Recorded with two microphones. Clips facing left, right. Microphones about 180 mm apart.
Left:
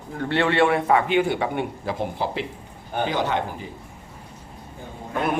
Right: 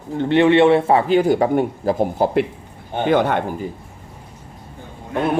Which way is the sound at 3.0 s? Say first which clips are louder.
Right 7 dB; 55° right (ahead or behind).